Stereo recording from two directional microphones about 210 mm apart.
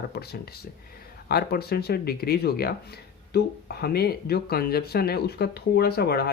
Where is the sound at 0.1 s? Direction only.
50° left (ahead or behind).